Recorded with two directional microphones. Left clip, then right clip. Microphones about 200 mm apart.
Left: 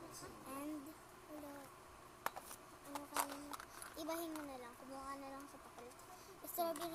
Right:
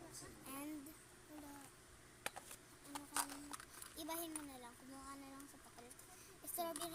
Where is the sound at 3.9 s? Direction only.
45° right (ahead or behind).